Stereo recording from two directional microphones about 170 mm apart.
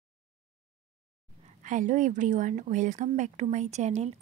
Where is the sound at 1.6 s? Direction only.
50° right (ahead or behind).